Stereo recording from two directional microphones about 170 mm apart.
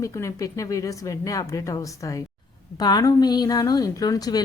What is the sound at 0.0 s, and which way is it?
A woman's voice, 20° left (ahead or behind).